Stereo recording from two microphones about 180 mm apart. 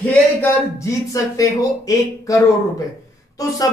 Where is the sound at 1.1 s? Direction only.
20° left (ahead or behind).